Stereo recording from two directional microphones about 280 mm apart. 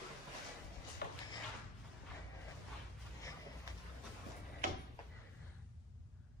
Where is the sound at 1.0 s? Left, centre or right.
Left.